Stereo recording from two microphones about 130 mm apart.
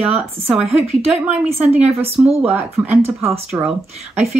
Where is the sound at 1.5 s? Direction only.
55° right (ahead or behind).